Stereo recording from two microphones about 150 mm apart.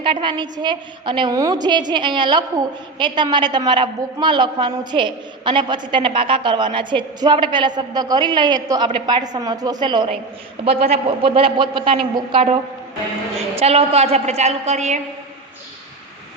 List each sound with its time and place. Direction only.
0.0 s a woman's voice: 35° right (ahead or behind)
10.6 s a woman's voice: 40° right (ahead or behind)
13.6 s a woman's voice: 40° right (ahead or behind)